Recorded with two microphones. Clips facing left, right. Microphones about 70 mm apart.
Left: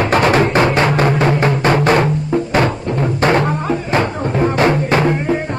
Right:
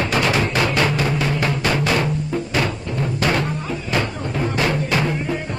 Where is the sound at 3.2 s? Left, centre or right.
Left.